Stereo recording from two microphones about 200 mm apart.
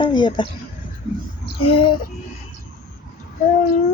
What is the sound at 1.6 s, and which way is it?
Speech, 25° left (ahead or behind).